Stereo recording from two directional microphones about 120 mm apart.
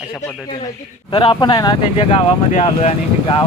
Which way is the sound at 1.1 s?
40° left (ahead or behind).